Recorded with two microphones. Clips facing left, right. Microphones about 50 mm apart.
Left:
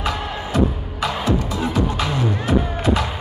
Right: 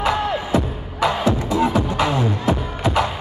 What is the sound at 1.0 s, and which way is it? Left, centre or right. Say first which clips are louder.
Music: right 2 dB; right.